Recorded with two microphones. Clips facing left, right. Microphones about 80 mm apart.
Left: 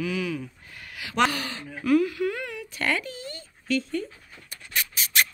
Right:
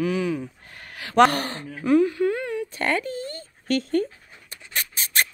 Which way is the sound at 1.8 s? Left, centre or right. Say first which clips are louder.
Right 3 dB; right.